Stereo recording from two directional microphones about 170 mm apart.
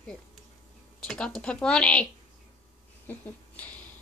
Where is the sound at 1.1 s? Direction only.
5° left (ahead or behind).